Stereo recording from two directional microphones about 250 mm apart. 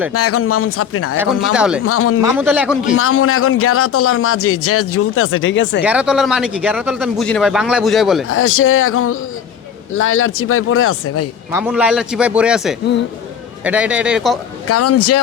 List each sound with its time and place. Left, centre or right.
0.1 s a man's voice: left
1.1 s speech: centre
1.8 s a man's voice: left
2.4 s speech: centre
2.9 s a man's voice: left
5.8 s speech: centre
8.3 s a man's voice: left
11.6 s speech: centre
14.7 s a man's voice: left